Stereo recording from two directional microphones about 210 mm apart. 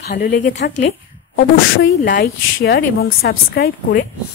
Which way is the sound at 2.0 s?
45° left (ahead or behind).